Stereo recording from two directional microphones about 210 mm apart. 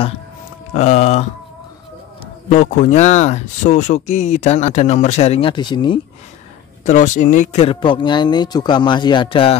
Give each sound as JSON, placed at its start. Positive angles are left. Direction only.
{"t": 0.7, "sound": "speech", "side_deg": 35}
{"t": 2.5, "sound": "speech", "side_deg": 35}
{"t": 6.9, "sound": "speech", "side_deg": 35}